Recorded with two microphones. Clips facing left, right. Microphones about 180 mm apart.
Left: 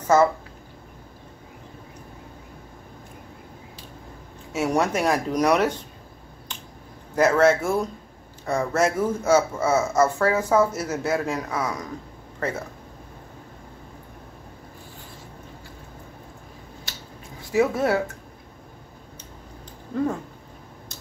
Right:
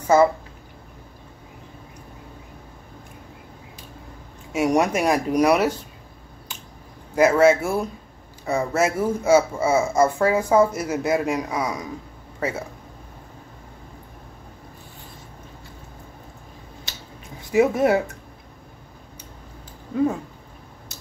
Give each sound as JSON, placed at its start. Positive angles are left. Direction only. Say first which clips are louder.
{"t": 0.1, "sound": "speech", "louder": "right 2 dB", "side_deg": -10}
{"t": 4.5, "sound": "speech", "louder": "right 3 dB", "side_deg": -15}
{"t": 7.2, "sound": "speech", "louder": "right 2 dB", "side_deg": -10}
{"t": 17.5, "sound": "speech", "louder": "right 3 dB", "side_deg": -15}